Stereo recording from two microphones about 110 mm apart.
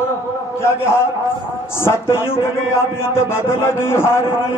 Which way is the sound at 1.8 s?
20° left (ahead or behind).